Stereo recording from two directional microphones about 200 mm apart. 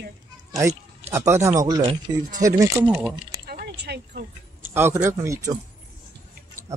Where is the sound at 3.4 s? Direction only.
50° right (ahead or behind).